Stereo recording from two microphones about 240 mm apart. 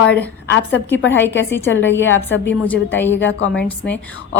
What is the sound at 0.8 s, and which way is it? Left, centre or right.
A woman's voice, left.